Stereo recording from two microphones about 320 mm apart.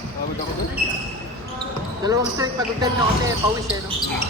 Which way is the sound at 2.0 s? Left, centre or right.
Centre.